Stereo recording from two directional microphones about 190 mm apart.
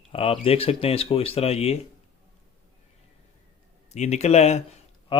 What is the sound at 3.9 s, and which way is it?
Speech, 35° left (ahead or behind).